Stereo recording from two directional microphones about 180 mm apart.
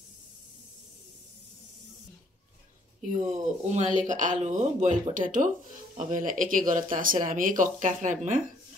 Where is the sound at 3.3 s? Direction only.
40° right (ahead or behind).